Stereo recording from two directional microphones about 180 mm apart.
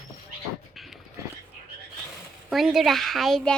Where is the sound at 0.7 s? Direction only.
Centre (ahead or behind).